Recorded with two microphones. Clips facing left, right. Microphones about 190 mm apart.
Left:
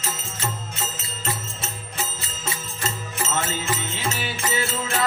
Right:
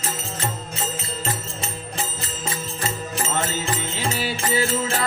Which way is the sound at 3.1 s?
30° right (ahead or behind).